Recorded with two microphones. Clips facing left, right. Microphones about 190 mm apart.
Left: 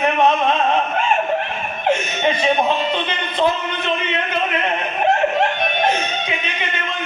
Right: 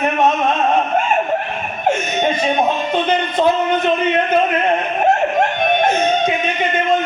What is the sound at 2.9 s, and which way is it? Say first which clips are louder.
Speech: right 5 dB; 45° right (ahead or behind).